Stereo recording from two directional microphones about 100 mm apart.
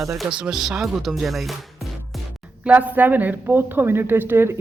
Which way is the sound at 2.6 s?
15° right (ahead or behind).